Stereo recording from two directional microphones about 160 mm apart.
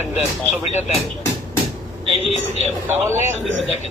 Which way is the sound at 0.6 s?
40° left (ahead or behind).